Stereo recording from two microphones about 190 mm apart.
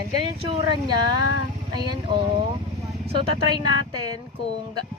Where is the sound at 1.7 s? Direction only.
25° right (ahead or behind).